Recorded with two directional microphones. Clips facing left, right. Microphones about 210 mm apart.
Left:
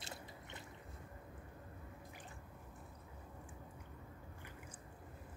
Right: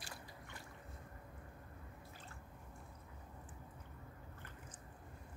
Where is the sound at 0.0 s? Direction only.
20° left (ahead or behind).